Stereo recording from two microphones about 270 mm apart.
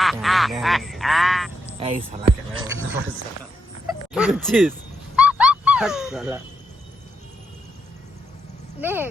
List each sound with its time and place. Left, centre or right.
0.0 s speech: centre
1.8 s speech: right
4.1 s speech: centre
5.1 s dog: centre
8.8 s speech: centre